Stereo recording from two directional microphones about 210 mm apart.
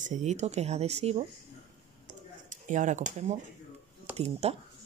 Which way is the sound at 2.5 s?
35° right (ahead or behind).